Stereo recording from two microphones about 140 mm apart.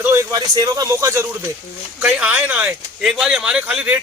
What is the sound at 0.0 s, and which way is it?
A man's voice, 20° right (ahead or behind).